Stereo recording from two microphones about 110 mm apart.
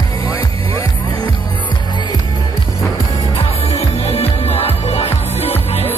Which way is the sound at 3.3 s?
70° left (ahead or behind).